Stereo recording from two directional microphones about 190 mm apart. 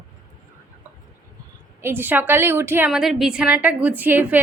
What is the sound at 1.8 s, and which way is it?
A woman's voice, 10° right (ahead or behind).